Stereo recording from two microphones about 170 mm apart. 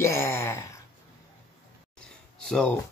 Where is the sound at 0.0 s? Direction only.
15° left (ahead or behind).